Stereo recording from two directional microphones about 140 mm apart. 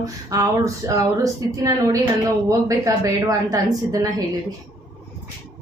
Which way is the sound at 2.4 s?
25° right (ahead or behind).